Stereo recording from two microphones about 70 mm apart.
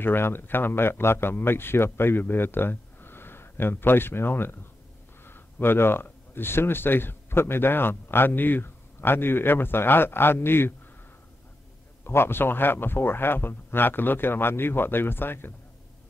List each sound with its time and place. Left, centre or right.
0.0 s speech: left
12.0 s speech: left